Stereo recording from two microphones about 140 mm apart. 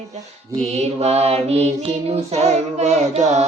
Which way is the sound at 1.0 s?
50° right (ahead or behind).